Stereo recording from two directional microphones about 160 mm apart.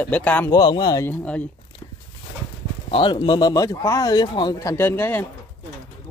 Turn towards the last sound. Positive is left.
turn(degrees=10)  # may be behind; listen again after turning